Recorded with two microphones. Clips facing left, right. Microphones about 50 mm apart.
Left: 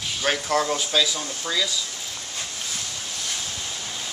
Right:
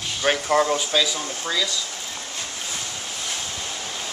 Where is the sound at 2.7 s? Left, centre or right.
Right.